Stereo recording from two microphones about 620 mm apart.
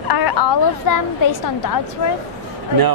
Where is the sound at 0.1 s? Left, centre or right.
Left.